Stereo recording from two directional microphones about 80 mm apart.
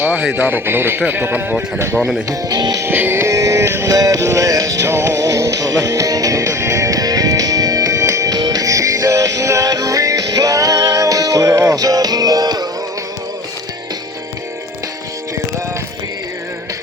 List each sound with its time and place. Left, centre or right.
0.0 s speech: centre
2.0 s speech: centre
2.3 s speech: right
2.8 s music: right